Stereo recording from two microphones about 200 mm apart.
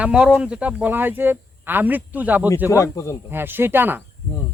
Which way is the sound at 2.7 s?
15° left (ahead or behind).